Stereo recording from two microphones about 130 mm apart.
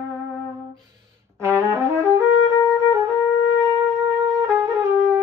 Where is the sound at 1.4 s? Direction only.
20° right (ahead or behind).